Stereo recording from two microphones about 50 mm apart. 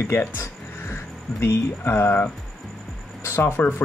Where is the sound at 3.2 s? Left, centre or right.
Left.